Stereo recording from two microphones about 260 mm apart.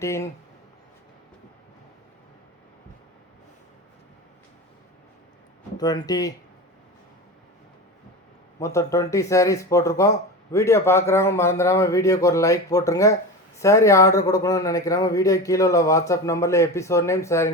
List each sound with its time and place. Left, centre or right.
0.0 s speech: centre
5.7 s speech: centre
8.5 s speech: centre